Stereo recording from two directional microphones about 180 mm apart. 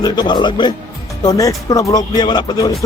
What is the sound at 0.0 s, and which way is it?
Speech, 25° left (ahead or behind).